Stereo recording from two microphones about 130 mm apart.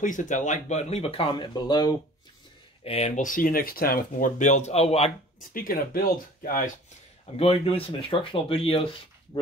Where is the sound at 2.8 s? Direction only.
50° left (ahead or behind).